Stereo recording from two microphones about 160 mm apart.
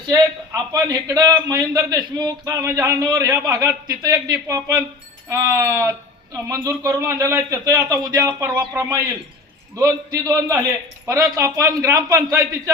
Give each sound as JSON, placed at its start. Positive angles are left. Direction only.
{"t": 0.1, "sound": "a man's voice", "side_deg": -20}